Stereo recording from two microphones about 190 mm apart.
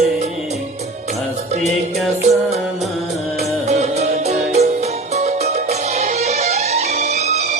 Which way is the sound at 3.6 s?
35° right (ahead or behind).